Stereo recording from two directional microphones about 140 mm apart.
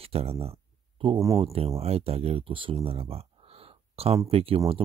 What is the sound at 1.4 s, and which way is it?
Speech, 45° right (ahead or behind).